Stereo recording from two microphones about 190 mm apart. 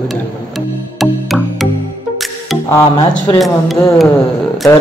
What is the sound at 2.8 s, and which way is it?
Speech, 15° left (ahead or behind).